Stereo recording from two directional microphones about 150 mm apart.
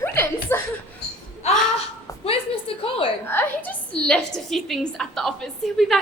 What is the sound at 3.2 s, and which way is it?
A woman's voice, 15° left (ahead or behind).